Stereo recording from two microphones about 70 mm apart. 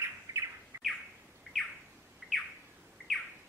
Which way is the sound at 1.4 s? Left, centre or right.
Centre.